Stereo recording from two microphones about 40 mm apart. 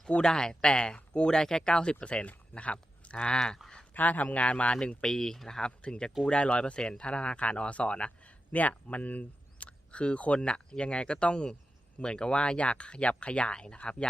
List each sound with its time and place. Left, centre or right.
0.2 s speech: centre
1.4 s speech: centre
3.9 s speech: left
4.8 s speech: centre; by 9.6 s left
9.6 s speech: left